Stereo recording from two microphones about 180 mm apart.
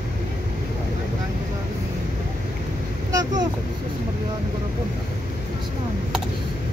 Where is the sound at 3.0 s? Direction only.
20° right (ahead or behind).